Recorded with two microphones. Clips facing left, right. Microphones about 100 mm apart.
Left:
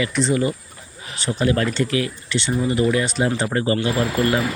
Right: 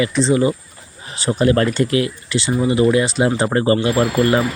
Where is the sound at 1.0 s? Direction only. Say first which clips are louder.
Right 5 dB; 35° right (ahead or behind).